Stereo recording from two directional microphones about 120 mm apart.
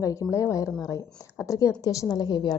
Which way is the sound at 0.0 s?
30° left (ahead or behind).